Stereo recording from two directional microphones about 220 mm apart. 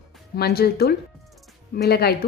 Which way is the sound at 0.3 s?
45° left (ahead or behind).